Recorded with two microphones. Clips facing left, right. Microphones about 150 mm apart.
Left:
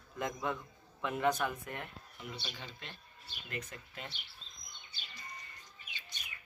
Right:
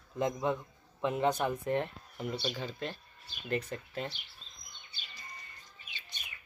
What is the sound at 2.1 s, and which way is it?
Speech, 45° right (ahead or behind).